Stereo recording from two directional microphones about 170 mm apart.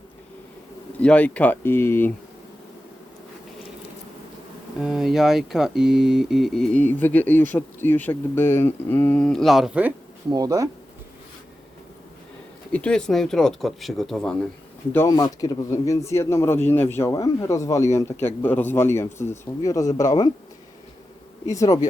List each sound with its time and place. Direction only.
0.9 s speech: 5° left (ahead or behind)
4.8 s speech: centre (ahead or behind)
10.2 s speech: 20° right (ahead or behind)
12.7 s speech: 5° left (ahead or behind)
14.9 s speech: 20° left (ahead or behind)
21.4 s speech: 20° left (ahead or behind)